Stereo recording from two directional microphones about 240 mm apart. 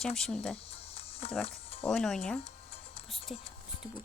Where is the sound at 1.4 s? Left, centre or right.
Left.